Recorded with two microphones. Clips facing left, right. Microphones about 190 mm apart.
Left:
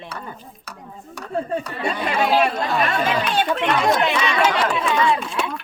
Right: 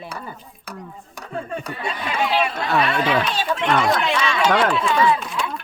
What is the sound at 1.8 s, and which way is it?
Speech, 45° left (ahead or behind).